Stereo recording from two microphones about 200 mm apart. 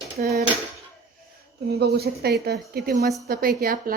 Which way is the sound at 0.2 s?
45° right (ahead or behind).